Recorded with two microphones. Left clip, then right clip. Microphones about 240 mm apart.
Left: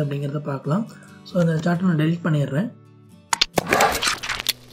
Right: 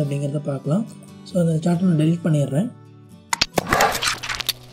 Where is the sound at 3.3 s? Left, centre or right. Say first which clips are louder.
Even; centre.